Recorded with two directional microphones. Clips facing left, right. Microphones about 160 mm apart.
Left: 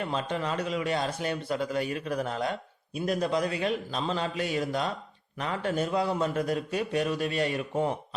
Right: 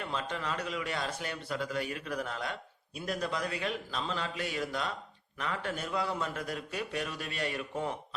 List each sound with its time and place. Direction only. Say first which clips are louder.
0.0 s a man's voice: left 6 dB; 20° left (ahead or behind)